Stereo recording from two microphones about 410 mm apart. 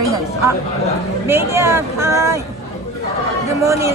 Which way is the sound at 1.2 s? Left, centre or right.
Centre.